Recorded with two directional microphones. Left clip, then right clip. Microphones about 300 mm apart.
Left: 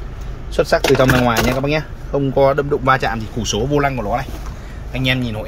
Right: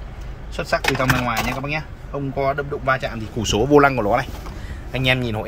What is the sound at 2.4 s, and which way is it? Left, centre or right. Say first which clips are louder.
Speech: left 6 dB; left.